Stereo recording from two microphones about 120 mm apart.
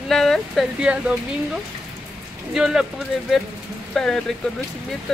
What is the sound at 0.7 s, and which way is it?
Speech, 10° right (ahead or behind).